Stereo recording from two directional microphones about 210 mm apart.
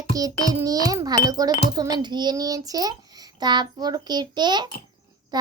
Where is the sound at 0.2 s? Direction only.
15° right (ahead or behind).